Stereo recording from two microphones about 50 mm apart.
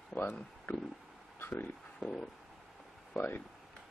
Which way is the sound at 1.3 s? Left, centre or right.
Left.